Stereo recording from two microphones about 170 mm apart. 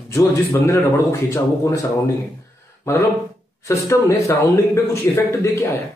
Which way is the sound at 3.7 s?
20° left (ahead or behind).